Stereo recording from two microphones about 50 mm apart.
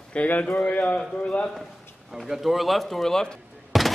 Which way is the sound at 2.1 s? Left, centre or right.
Centre.